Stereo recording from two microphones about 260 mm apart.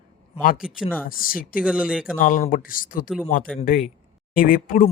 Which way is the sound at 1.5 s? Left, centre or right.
Centre.